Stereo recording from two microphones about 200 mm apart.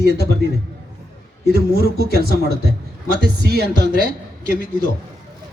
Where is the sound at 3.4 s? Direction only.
55° right (ahead or behind).